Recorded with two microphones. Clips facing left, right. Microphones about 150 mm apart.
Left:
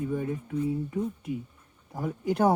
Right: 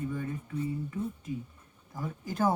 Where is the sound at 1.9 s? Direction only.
65° left (ahead or behind).